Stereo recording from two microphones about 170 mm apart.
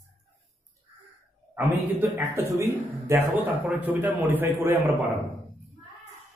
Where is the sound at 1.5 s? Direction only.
15° right (ahead or behind).